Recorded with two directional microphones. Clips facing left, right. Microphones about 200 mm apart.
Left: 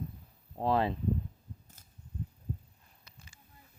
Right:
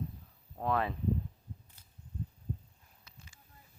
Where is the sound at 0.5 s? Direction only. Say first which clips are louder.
Left 4 dB; 30° left (ahead or behind).